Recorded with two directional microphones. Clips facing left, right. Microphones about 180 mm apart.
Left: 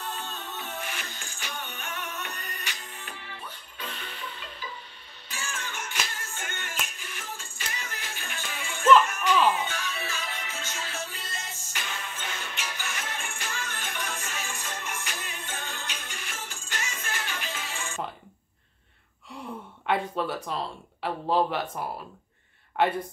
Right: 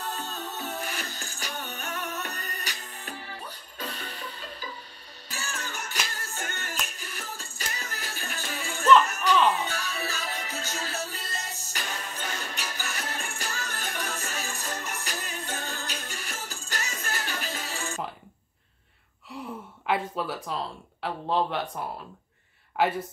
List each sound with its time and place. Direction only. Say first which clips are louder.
0.0 s music: right 2 dB; 40° right (ahead or behind)
19.4 s gasp: right 2 dB; centre (ahead or behind)
19.9 s speech: left 1 dB; centre (ahead or behind)
22.8 s speech: even; 5° right (ahead or behind)